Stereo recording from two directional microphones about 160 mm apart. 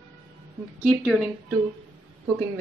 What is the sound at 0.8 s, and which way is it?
Speech, 5° right (ahead or behind).